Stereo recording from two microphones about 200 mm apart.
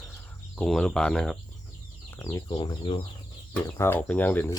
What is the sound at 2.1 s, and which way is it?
Speech, 20° left (ahead or behind).